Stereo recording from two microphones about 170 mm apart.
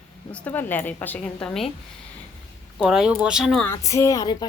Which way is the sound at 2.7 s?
Centre (ahead or behind).